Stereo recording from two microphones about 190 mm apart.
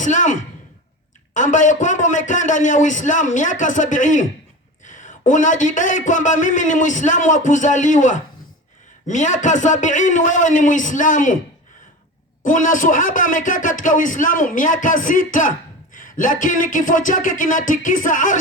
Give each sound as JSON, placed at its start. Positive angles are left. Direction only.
{"t": 0.0, "sound": "a man's voice", "side_deg": 40}
{"t": 12.5, "sound": "a man's voice", "side_deg": 45}